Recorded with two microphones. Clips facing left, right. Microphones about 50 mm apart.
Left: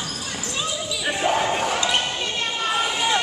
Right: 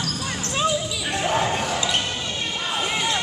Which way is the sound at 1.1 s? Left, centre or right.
Centre.